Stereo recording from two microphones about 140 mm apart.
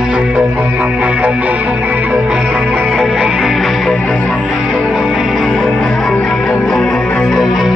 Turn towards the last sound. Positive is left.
turn(degrees=0)  # may be behind; listen again after turning